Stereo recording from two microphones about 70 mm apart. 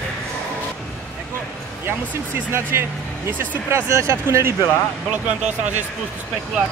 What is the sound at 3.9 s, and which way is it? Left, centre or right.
Speech, right.